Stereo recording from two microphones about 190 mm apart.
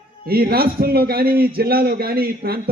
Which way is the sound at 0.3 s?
55° right (ahead or behind).